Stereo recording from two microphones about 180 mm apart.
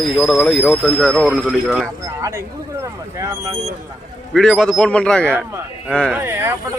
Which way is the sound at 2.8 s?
20° right (ahead or behind).